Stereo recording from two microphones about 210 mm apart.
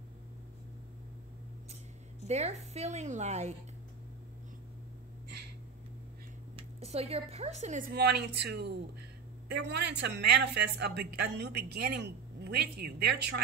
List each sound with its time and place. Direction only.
2.2 s a woman's voice: 30° right (ahead or behind)
6.5 s speech: 30° right (ahead or behind)
7.9 s speech: 50° right (ahead or behind)